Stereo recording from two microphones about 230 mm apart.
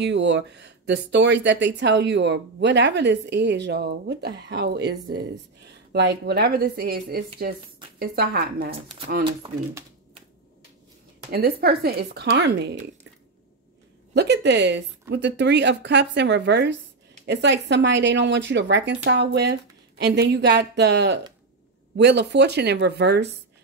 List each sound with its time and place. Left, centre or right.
0.0 s a woman's voice: right
8.7 s speech: right
11.3 s speech: right
14.1 s speech: right